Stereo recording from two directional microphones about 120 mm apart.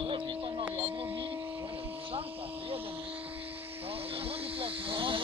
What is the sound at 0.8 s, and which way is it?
Speech, 15° right (ahead or behind).